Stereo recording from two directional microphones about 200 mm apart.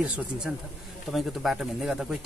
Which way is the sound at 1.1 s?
Centre (ahead or behind).